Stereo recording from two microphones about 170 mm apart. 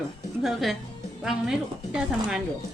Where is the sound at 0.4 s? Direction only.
Centre (ahead or behind).